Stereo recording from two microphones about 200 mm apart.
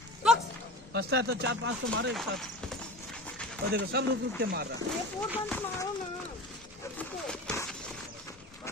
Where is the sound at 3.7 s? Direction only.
55° right (ahead or behind).